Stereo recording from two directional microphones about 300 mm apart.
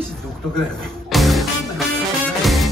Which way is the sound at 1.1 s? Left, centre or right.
Centre.